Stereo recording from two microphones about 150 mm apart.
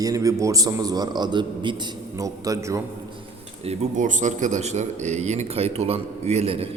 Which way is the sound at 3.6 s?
45° right (ahead or behind).